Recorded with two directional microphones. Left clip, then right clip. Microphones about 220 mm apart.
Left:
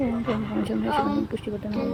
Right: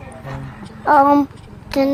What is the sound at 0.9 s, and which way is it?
Speech, 45° right (ahead or behind).